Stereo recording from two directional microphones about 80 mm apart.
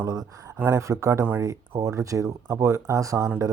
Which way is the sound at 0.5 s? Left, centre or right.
Right.